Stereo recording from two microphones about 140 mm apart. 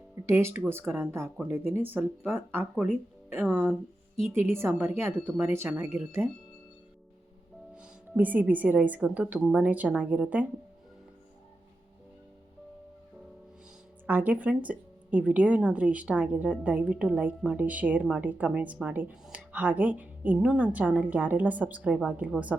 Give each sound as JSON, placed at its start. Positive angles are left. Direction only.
{"t": 0.3, "sound": "a woman's voice", "side_deg": -20}
{"t": 4.3, "sound": "a woman's voice", "side_deg": -15}
{"t": 7.8, "sound": "a woman's voice", "side_deg": -10}
{"t": 14.1, "sound": "a woman's voice", "side_deg": -10}